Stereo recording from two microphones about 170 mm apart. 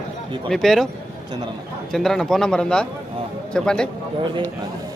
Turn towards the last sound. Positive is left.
turn(degrees=5)  # may be behind; listen again after turning